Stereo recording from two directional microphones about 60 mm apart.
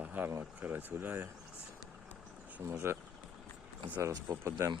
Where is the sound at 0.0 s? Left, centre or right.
Right.